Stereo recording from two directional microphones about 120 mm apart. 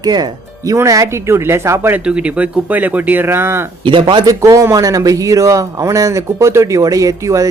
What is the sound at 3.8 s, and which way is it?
Speech, 40° right (ahead or behind).